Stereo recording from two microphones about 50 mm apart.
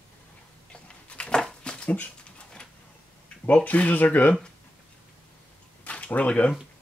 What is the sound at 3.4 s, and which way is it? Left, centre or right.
Speech, left.